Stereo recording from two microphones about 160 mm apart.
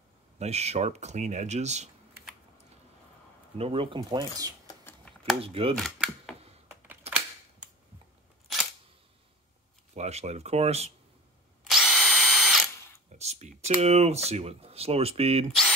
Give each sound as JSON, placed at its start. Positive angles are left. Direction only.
{"t": 0.4, "sound": "speech", "side_deg": -40}
{"t": 3.5, "sound": "speech", "side_deg": -35}
{"t": 5.0, "sound": "a sound", "side_deg": 0}
{"t": 5.4, "sound": "speech", "side_deg": -35}
{"t": 5.8, "sound": "camera", "side_deg": 0}
{"t": 7.1, "sound": "a sound", "side_deg": -10}
{"t": 9.9, "sound": "speech", "side_deg": -45}
{"t": 11.6, "sound": "drill", "side_deg": 0}
{"t": 13.2, "sound": "computer keyboard", "side_deg": -45}
{"t": 13.7, "sound": "speech", "side_deg": -40}